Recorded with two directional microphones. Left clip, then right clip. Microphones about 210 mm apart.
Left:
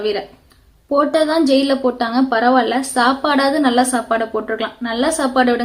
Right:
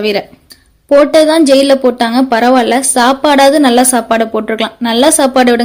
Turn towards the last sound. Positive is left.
turn(degrees=-40)  # may be behind; listen again after turning